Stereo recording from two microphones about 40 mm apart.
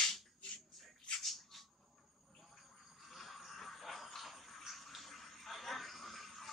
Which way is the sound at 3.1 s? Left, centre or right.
Centre.